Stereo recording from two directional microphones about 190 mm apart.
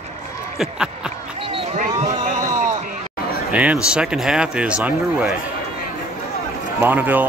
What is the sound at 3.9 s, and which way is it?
Speech, 5° right (ahead or behind).